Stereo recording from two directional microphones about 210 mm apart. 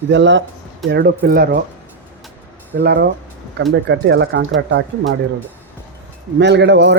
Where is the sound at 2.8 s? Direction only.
50° right (ahead or behind).